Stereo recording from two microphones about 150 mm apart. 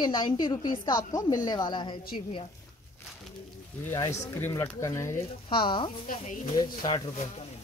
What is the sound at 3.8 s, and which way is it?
A woman's voice, 20° left (ahead or behind).